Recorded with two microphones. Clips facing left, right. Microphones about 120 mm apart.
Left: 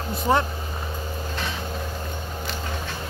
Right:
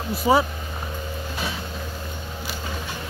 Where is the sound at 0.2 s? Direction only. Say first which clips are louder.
Right 3 dB; 5° right (ahead or behind).